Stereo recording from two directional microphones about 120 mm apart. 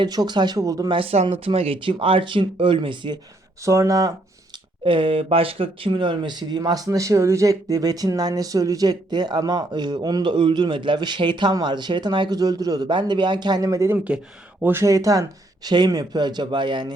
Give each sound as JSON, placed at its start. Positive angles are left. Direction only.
{"t": 0.0, "sound": "speech", "side_deg": -35}
{"t": 0.9, "sound": "speech", "side_deg": -55}
{"t": 3.6, "sound": "speech", "side_deg": -25}
{"t": 4.8, "sound": "speech", "side_deg": -45}